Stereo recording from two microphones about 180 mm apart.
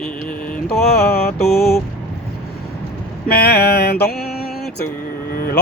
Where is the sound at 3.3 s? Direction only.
60° left (ahead or behind).